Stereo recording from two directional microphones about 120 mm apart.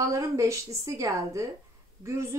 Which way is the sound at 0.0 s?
25° right (ahead or behind).